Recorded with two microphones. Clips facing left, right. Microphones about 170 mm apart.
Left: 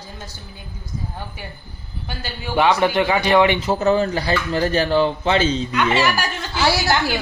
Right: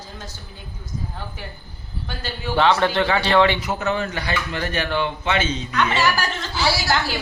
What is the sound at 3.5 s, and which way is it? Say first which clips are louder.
Speech: left 6 dB; 30° left (ahead or behind).